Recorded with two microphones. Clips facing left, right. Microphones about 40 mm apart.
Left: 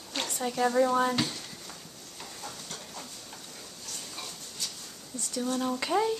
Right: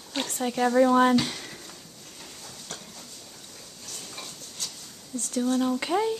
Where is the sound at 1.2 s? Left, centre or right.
Right.